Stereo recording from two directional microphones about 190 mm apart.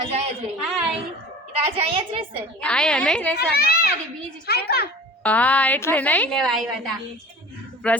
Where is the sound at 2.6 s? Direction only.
5° left (ahead or behind).